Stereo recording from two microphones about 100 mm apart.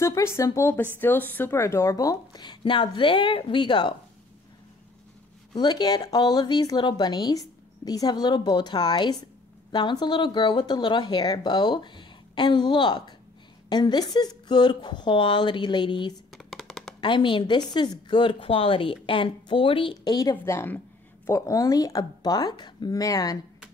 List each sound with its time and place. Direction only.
0.0 s a woman's voice: 30° left (ahead or behind); by 3.9 s 50° left (ahead or behind)
5.5 s speech: 45° left (ahead or behind)
16.3 s a sound: centre (ahead or behind)
17.0 s a woman's voice: 55° left (ahead or behind)
20.4 s a woman's voice: 25° left (ahead or behind)
21.3 s speech: 35° left (ahead or behind)